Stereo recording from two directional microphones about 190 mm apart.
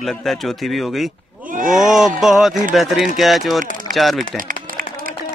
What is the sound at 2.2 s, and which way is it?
Speech, centre (ahead or behind).